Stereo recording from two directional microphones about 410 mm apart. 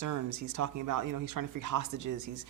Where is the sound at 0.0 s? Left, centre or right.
Right.